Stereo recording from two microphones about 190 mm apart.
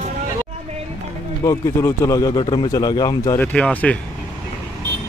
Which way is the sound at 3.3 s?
5° left (ahead or behind).